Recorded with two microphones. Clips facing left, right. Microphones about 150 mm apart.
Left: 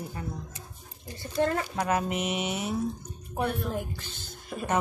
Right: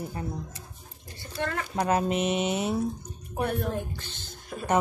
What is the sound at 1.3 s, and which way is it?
Speech, 35° left (ahead or behind).